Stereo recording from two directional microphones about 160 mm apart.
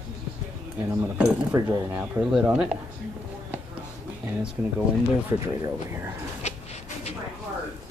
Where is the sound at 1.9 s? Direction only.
5° right (ahead or behind).